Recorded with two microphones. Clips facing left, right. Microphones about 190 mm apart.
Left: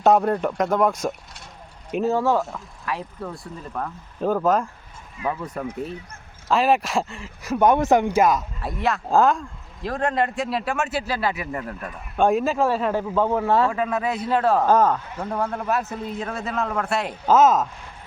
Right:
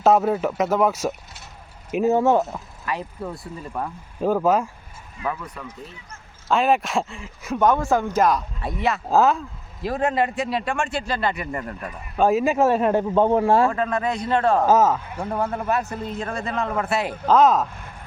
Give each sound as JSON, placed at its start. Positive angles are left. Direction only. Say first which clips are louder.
{"t": 0.0, "sound": "speech", "louder": "even", "side_deg": 0}
{"t": 2.0, "sound": "speech", "louder": "right 3 dB", "side_deg": -20}
{"t": 2.8, "sound": "speech", "louder": "right 1 dB", "side_deg": 0}
{"t": 5.2, "sound": "speech", "louder": "left 1 dB", "side_deg": 25}
{"t": 5.5, "sound": "speech", "louder": "left 9 dB", "side_deg": 55}
{"t": 6.5, "sound": "speech", "louder": "even", "side_deg": 0}
{"t": 7.6, "sound": "speech", "louder": "left 2 dB", "side_deg": 15}
{"t": 8.2, "sound": "speech", "louder": "even", "side_deg": 0}
{"t": 12.5, "sound": "speech", "louder": "right 3 dB", "side_deg": -20}
{"t": 13.7, "sound": "speech", "louder": "right 1 dB", "side_deg": 5}